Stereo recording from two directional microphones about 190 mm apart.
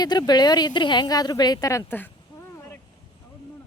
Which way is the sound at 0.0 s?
20° left (ahead or behind).